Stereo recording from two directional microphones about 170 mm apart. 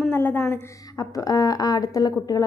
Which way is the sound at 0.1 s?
15° left (ahead or behind).